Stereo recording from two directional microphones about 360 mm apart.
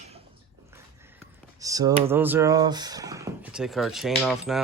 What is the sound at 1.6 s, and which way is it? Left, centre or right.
Speech, centre.